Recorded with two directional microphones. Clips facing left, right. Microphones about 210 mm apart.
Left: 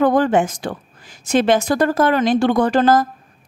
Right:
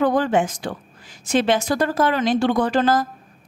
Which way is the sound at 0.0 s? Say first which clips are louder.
Left 3 dB; 50° left (ahead or behind).